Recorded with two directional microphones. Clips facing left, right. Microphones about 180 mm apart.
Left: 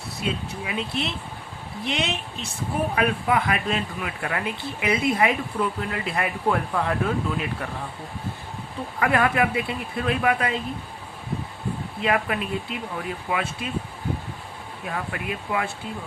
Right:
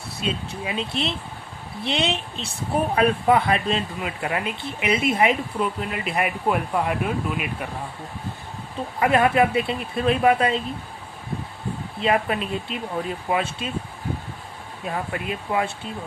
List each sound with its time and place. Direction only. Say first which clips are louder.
0.2 s speech: right 1 dB; 25° right (ahead or behind)
9.0 s speech: right 3 dB; 25° right (ahead or behind)
12.0 s speech: right 2 dB; 25° right (ahead or behind)
14.8 s speech: right 2 dB; 25° right (ahead or behind)